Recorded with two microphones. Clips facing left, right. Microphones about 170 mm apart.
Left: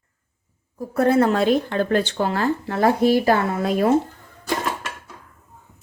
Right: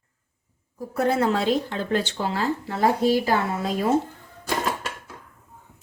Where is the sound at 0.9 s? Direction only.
55° left (ahead or behind).